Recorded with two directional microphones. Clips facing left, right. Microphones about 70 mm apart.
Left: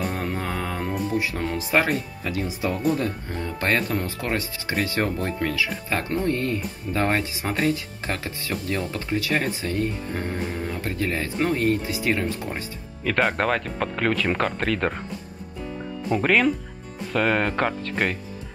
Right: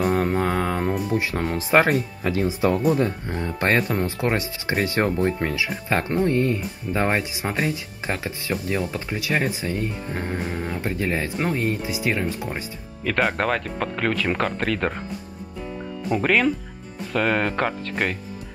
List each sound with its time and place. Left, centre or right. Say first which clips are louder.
0.0 s mantra: right 7 dB; right
1.0 s speech: right 1 dB; right; by 15.0 s centre
16.2 s speech: even; centre